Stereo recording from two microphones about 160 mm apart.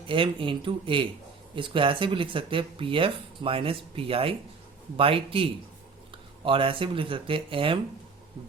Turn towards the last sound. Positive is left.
turn(degrees=-35)  # may be behind; listen again after turning